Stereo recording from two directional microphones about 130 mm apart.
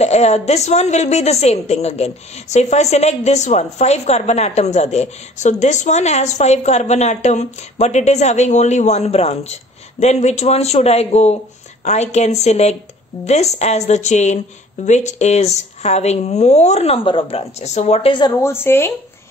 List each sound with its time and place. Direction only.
0.0 s a woman's voice: 55° left (ahead or behind)
18.4 s a woman's voice: 20° left (ahead or behind)